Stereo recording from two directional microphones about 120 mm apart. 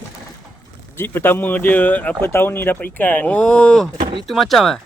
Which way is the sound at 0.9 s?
20° left (ahead or behind).